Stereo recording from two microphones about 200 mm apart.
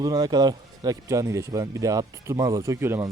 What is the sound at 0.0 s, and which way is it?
A man's voice, 20° right (ahead or behind).